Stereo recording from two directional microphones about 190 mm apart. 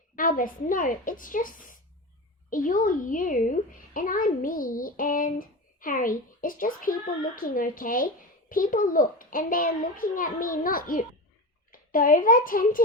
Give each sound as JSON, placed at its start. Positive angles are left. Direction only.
{"t": 0.2, "sound": "a child's voice", "side_deg": 45}